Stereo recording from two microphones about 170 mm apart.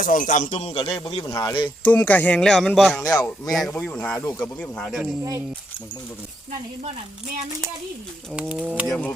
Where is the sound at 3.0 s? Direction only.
20° left (ahead or behind).